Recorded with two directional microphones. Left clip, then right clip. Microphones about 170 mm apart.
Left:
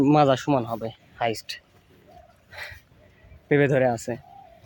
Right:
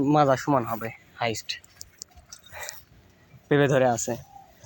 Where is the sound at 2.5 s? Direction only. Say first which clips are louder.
Left 1 dB; 10° left (ahead or behind).